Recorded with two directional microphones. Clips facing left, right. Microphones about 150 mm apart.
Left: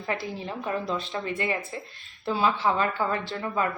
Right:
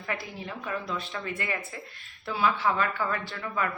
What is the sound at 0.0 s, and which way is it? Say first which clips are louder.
A woman's voice: left 4 dB; 30° left (ahead or behind).